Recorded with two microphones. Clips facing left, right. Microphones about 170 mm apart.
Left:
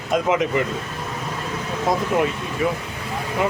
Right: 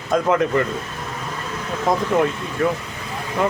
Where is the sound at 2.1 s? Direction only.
10° left (ahead or behind).